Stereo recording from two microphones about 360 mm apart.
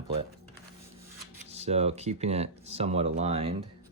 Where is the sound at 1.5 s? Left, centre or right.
Centre.